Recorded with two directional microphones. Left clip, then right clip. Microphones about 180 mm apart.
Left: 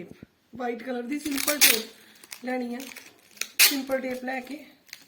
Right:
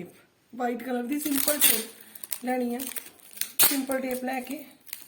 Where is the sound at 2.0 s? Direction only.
40° right (ahead or behind).